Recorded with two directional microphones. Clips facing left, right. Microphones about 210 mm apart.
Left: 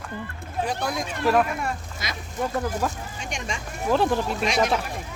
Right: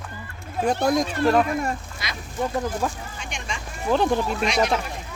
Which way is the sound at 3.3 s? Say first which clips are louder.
Left 3 dB; 40° left (ahead or behind).